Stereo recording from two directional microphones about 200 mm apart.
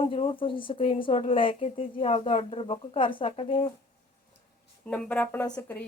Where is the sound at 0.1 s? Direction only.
25° left (ahead or behind).